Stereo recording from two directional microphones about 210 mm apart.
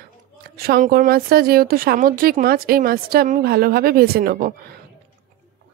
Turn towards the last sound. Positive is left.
turn(degrees=-45)  # may be behind; listen again after turning